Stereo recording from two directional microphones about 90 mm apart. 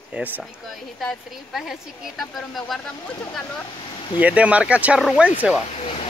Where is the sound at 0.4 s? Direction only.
Centre (ahead or behind).